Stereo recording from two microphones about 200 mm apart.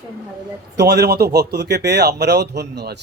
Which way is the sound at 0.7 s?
55° right (ahead or behind).